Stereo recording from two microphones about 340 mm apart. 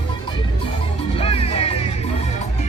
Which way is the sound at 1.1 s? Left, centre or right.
Centre.